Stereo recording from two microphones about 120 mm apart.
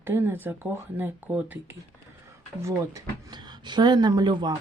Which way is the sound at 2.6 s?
35° right (ahead or behind).